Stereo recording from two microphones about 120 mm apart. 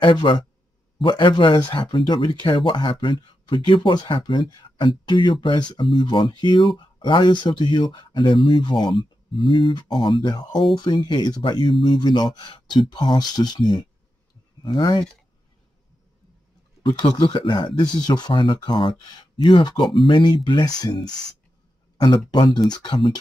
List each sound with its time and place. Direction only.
0.0 s speech: 40° left (ahead or behind)
17.0 s speech: 40° left (ahead or behind)